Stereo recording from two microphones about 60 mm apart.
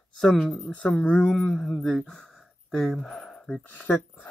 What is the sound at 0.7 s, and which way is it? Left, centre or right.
Speech, left.